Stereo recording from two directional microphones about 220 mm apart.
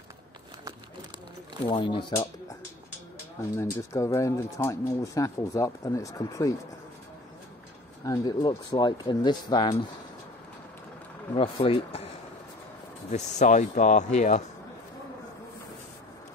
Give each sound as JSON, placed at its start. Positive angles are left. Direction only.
{"t": 1.7, "sound": "speech", "side_deg": 20}
{"t": 3.3, "sound": "speech", "side_deg": 15}
{"t": 8.0, "sound": "speech", "side_deg": 15}
{"t": 11.3, "sound": "speech", "side_deg": 25}
{"t": 13.1, "sound": "speech", "side_deg": 30}